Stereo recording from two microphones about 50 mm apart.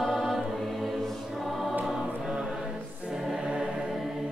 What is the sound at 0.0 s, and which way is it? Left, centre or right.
Choir, centre.